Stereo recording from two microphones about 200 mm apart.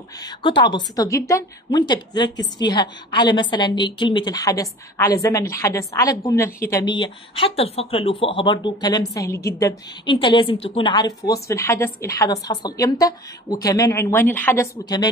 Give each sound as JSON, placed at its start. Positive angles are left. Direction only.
{"t": 0.2, "sound": "a woman's voice", "side_deg": 20}